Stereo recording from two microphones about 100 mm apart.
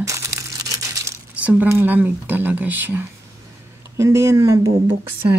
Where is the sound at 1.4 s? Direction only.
15° right (ahead or behind); by 4.7 s 30° right (ahead or behind).